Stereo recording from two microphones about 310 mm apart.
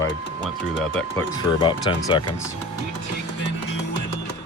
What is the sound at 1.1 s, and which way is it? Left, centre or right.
Speech, centre.